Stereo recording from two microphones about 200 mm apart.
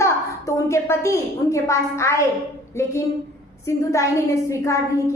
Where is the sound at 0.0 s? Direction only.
15° left (ahead or behind).